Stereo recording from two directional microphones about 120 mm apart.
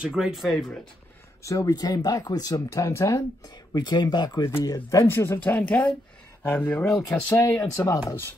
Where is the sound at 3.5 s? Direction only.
35° left (ahead or behind); by 8.3 s 20° left (ahead or behind).